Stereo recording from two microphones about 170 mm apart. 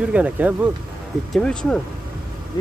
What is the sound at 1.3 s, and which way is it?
Speech, 5° left (ahead or behind).